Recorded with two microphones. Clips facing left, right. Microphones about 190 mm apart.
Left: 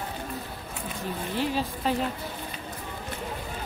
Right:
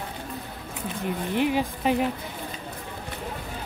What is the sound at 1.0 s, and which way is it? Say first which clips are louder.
Speech: right 5 dB; 15° right (ahead or behind).